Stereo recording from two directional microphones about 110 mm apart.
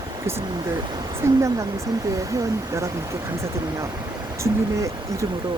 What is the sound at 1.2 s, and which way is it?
Speech, 25° right (ahead or behind).